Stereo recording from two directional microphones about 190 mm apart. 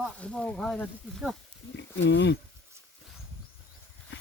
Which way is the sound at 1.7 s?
70° left (ahead or behind).